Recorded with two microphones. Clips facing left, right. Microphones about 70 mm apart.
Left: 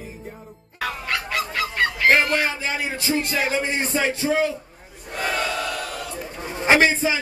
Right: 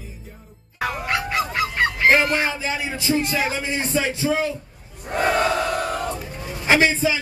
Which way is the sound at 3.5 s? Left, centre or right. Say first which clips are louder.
Left 1 dB; left.